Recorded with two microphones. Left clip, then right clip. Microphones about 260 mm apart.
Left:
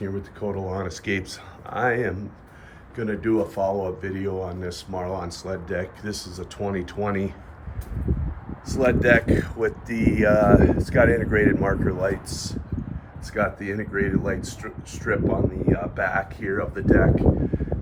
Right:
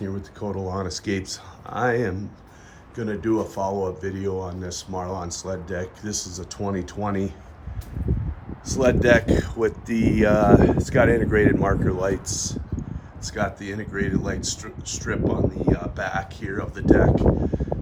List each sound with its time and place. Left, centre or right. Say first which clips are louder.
0.0 s speech: left 2 dB; centre
8.7 s speech: right 1 dB; right
12.3 s speech: right 3 dB; centre